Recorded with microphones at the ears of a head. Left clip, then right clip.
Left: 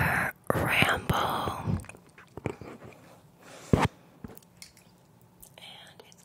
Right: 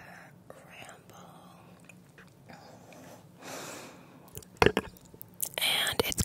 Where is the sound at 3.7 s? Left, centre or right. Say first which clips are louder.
Left 17 dB; left.